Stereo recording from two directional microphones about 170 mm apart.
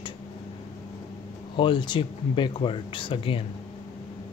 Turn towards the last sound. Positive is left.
turn(degrees=30)  # may be behind; listen again after turning